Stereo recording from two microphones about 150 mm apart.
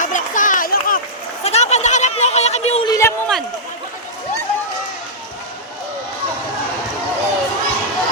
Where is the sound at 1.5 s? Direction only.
45° left (ahead or behind).